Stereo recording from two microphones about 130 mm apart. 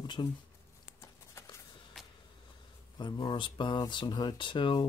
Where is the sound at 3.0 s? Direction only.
35° left (ahead or behind).